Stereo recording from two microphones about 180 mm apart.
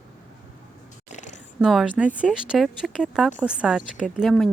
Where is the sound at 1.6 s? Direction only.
Centre (ahead or behind).